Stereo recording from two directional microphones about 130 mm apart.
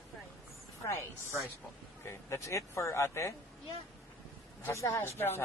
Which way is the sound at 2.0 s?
20° left (ahead or behind).